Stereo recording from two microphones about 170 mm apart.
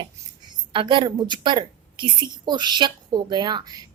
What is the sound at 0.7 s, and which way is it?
A woman's voice, 30° right (ahead or behind).